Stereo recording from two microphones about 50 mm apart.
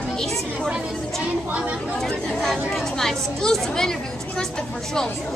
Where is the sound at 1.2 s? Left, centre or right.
Right.